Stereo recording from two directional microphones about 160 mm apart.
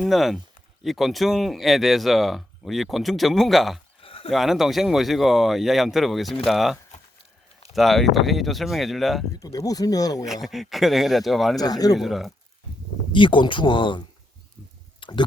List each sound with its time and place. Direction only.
0.0 s speech: centre (ahead or behind)
4.0 s a sound: 35° left (ahead or behind)
4.3 s speech: centre (ahead or behind)
9.4 s speech: 20° left (ahead or behind)
10.2 s speech: centre (ahead or behind)
11.6 s speech: 25° left (ahead or behind)
11.9 s speech: centre (ahead or behind)
13.1 s speech: 30° left (ahead or behind)
15.0 s a sound: 30° left (ahead or behind)